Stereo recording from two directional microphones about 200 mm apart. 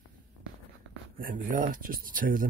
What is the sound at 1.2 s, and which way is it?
Speech, 45° right (ahead or behind).